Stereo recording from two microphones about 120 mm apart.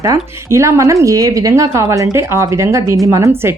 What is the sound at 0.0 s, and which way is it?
Speech, 25° right (ahead or behind).